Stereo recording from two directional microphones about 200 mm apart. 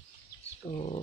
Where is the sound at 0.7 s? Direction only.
30° left (ahead or behind).